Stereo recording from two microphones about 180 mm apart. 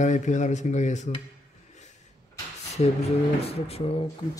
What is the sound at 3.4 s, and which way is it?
Speech, 35° left (ahead or behind).